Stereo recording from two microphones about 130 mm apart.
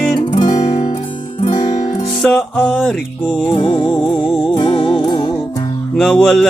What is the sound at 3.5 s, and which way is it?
Music, 40° left (ahead or behind).